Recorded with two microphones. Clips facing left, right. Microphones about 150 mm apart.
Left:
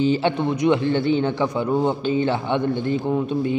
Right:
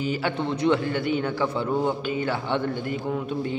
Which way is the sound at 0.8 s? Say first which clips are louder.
Left 6 dB; 25° left (ahead or behind).